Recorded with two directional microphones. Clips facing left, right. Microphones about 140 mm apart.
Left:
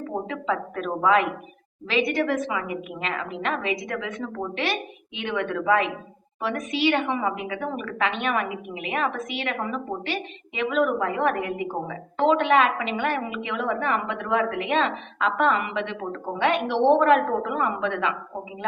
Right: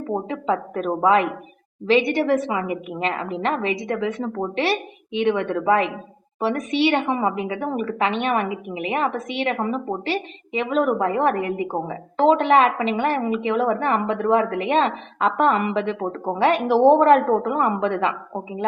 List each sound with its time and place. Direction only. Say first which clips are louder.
0.1 s a woman's voice: right 5 dB; 30° right (ahead or behind)